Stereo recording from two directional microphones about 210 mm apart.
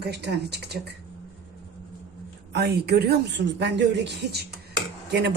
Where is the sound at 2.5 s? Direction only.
50° right (ahead or behind).